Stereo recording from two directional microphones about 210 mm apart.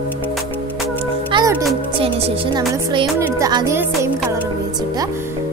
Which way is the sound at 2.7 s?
25° right (ahead or behind).